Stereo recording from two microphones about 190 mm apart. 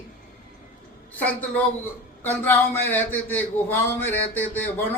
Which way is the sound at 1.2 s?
10° left (ahead or behind).